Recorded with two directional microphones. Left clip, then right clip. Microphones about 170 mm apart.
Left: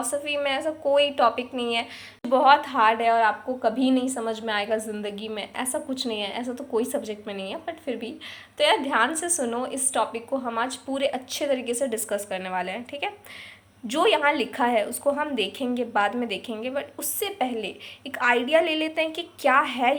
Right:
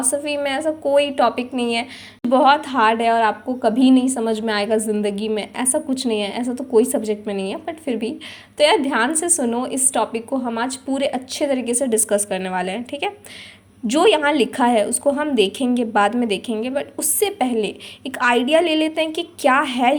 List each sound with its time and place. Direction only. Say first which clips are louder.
0.0 s a woman's voice: right 4 dB; 25° right (ahead or behind)